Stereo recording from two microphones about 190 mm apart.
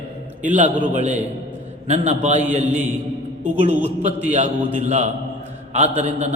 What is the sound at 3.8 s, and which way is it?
A man's voice, 35° right (ahead or behind).